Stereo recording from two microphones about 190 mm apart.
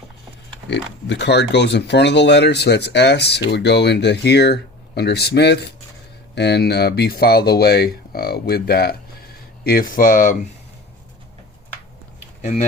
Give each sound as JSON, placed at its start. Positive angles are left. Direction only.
{"t": 0.7, "sound": "speech", "side_deg": 65}
{"t": 12.4, "sound": "speech", "side_deg": 35}